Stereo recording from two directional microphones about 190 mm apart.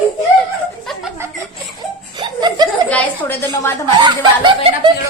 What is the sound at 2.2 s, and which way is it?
Laughter, 20° right (ahead or behind).